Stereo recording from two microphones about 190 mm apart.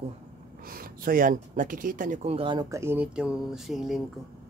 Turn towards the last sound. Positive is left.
turn(degrees=0)  # may be behind; listen again after turning